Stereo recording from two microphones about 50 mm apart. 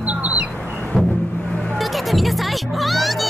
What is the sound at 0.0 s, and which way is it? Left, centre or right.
Bird, right.